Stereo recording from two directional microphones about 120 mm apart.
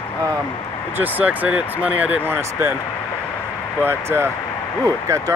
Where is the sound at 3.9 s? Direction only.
20° right (ahead or behind).